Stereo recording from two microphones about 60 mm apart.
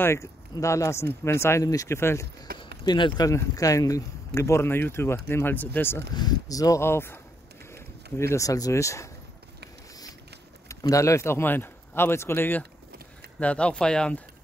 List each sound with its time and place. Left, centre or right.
0.0 s speech: left
1.6 s speech: left
1.9 s speech: left
3.2 s speech: left
3.5 s speech: left
5.5 s speech: left
6.5 s speech: left
6.8 s speech: left
7.7 s a sound: left
8.5 s speech: left
10.7 s speech: left
11.4 s speech: left
13.4 s speech: centre